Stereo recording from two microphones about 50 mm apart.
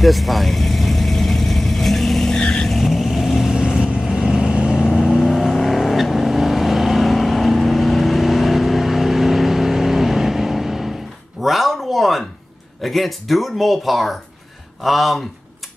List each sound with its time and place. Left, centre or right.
0.0 s vehicle: centre
3.6 s vehicle: centre
4.9 s vehicle: centre
11.4 s a sound: centre
12.8 s speech: centre